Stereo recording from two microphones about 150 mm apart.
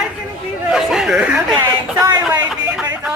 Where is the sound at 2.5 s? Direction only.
5° right (ahead or behind).